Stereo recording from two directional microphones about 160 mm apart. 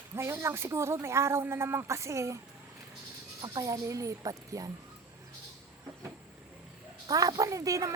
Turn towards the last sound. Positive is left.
turn(degrees=-20)  # may be behind; listen again after turning